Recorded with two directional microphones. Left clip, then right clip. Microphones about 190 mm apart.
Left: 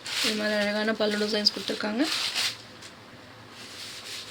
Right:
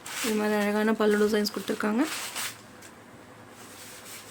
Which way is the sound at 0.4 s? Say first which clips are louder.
Even; 60° right (ahead or behind).